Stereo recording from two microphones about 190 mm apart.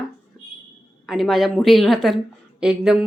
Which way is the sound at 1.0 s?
Centre (ahead or behind).